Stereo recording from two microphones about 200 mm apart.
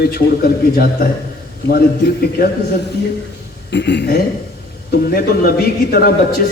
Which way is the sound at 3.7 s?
60° left (ahead or behind).